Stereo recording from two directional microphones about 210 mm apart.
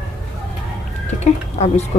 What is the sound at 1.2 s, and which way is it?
Speech, 30° left (ahead or behind).